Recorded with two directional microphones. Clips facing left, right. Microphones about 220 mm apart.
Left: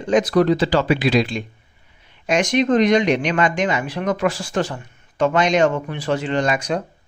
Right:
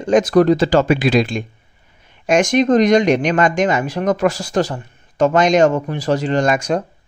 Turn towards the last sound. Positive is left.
turn(degrees=-45)  # may be behind; listen again after turning